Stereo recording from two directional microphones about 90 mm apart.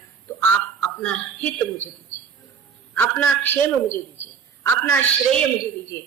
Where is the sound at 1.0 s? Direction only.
10° left (ahead or behind).